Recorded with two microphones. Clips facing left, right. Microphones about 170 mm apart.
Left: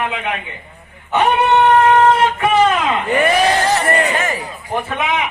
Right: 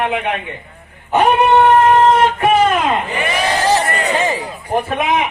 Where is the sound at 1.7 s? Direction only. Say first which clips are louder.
Right 1 dB; 25° right (ahead or behind).